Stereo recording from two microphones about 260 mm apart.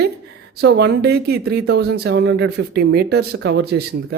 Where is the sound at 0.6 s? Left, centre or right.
Right.